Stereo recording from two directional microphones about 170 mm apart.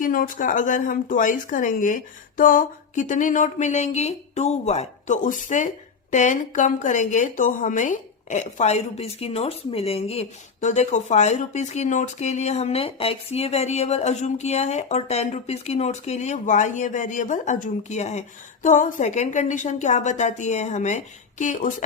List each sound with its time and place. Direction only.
0.0 s a woman's voice: 55° left (ahead or behind)